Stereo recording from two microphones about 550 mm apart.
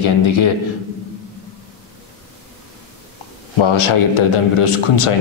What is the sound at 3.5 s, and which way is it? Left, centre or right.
A man's voice, left.